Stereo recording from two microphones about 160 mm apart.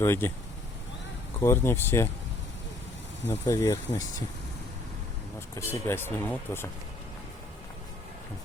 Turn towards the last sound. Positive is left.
turn(degrees=15)  # may be behind; listen again after turning